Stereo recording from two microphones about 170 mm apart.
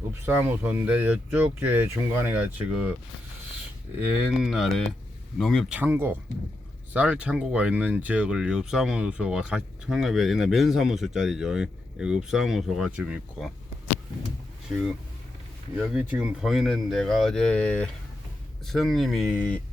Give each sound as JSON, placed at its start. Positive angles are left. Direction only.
{"t": 0.3, "sound": "speech", "side_deg": -10}
{"t": 4.3, "sound": "speech", "side_deg": 0}
{"t": 5.7, "sound": "speech", "side_deg": -10}
{"t": 15.8, "sound": "speech", "side_deg": -5}